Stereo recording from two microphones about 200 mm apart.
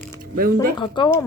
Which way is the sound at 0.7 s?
25° left (ahead or behind).